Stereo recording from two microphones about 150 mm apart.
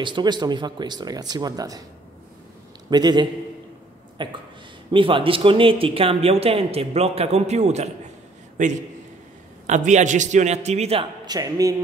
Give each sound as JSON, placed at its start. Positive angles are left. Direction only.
{"t": 0.0, "sound": "speech", "side_deg": -30}
{"t": 2.9, "sound": "a man's voice", "side_deg": -30}
{"t": 11.2, "sound": "speech", "side_deg": -25}